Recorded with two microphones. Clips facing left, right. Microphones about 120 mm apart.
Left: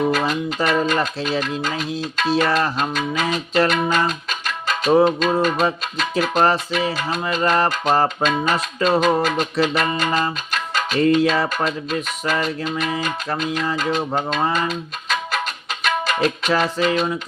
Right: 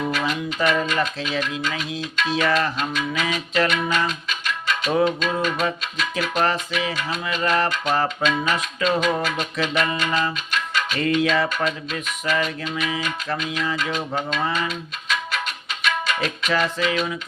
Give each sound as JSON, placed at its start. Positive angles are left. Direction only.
{"t": 0.1, "sound": "music", "side_deg": 40}